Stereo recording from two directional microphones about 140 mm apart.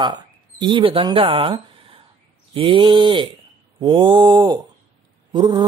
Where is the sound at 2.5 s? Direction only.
40° right (ahead or behind).